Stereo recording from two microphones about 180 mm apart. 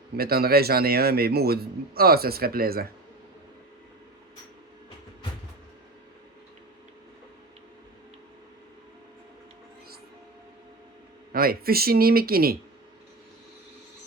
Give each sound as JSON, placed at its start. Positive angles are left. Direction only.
{"t": 0.2, "sound": "a man's voice", "side_deg": -60}
{"t": 11.3, "sound": "a man's voice", "side_deg": -55}